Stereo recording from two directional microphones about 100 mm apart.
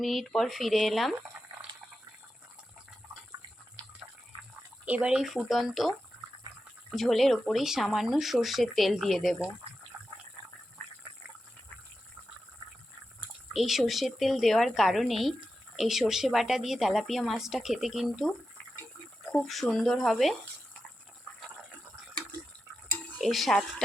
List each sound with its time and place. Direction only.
0.0 s a woman's voice: centre (ahead or behind)
4.9 s a woman's voice: 10° right (ahead or behind)
6.9 s a woman's voice: centre (ahead or behind)
9.9 s a sound: 15° right (ahead or behind)
13.5 s a woman's voice: centre (ahead or behind)
19.3 s a woman's voice: 5° left (ahead or behind)
23.1 s speech: centre (ahead or behind)